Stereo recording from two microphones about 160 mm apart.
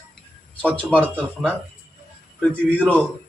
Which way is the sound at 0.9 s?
10° left (ahead or behind).